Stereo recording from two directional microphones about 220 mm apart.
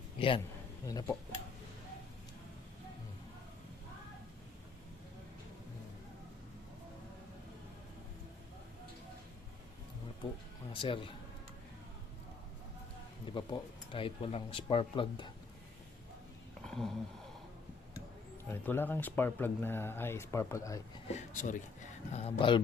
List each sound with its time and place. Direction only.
0.2 s speech: 25° left (ahead or behind)
0.9 s speech: 15° left (ahead or behind)
10.7 s speech: 25° left (ahead or behind)
13.3 s speech: 20° left (ahead or behind)
16.6 s a sound: centre (ahead or behind)
18.4 s speech: 10° left (ahead or behind)
21.1 s speech: 30° left (ahead or behind)